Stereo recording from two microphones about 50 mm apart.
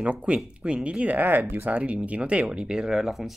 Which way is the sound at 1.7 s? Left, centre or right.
Right.